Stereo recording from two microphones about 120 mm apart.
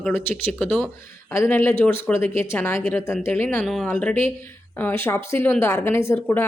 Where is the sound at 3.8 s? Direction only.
15° left (ahead or behind).